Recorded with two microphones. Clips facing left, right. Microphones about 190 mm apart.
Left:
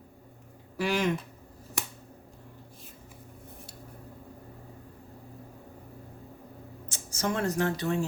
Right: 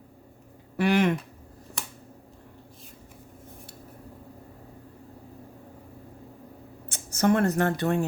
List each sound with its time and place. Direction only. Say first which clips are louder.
0.8 s speech: right 5 dB; 60° right (ahead or behind)
6.8 s a woman's voice: right 8 dB; 60° right (ahead or behind)